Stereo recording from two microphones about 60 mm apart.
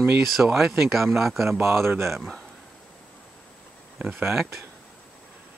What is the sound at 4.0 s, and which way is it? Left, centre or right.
Speech, right.